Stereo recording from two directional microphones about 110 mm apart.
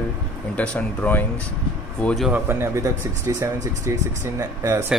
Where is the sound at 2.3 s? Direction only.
20° right (ahead or behind).